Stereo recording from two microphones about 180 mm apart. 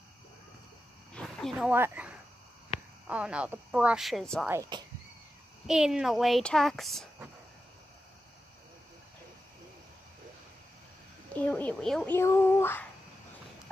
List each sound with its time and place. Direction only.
1.1 s a sound: centre (ahead or behind)
1.7 s speech: 10° right (ahead or behind)
4.5 s speech: 20° right (ahead or behind)
5.7 s speech: 5° right (ahead or behind)
11.3 s speech: 10° left (ahead or behind)
12.2 s speech: 15° left (ahead or behind)